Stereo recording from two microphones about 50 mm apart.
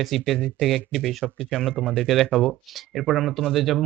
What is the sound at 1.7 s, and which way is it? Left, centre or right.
Speech, centre.